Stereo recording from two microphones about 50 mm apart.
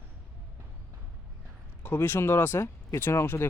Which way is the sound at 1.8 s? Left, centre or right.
Left.